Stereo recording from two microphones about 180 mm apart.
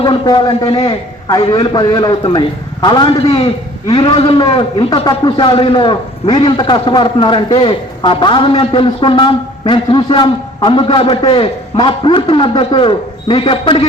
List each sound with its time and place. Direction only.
0.0 s a man's voice: 25° left (ahead or behind)